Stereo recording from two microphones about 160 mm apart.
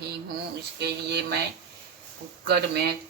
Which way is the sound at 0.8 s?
90° right.